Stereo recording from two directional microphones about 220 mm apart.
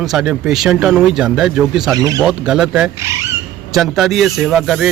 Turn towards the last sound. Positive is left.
turn(degrees=0)  # may be behind; listen again after turning